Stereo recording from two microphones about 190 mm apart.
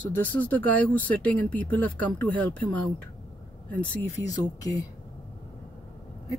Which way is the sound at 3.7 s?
10° left (ahead or behind).